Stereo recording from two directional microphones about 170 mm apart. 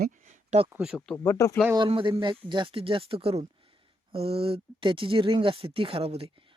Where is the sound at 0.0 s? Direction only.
50° right (ahead or behind).